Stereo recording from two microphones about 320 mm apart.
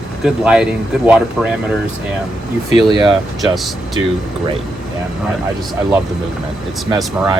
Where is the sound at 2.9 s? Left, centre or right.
Centre.